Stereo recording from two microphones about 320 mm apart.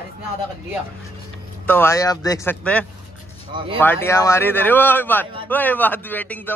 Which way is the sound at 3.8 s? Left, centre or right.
Centre.